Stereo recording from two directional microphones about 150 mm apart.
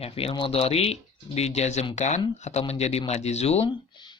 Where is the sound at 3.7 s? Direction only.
30° left (ahead or behind).